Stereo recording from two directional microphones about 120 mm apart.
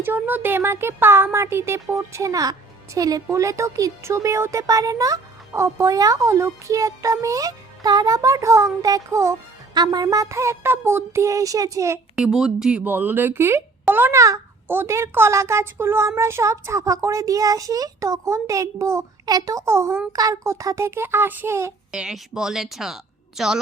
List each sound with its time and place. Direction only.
0.0 s speech: 15° right (ahead or behind)
12.1 s speech: 5° right (ahead or behind); by 21.7 s 20° right (ahead or behind)
21.9 s speech: 5° right (ahead or behind)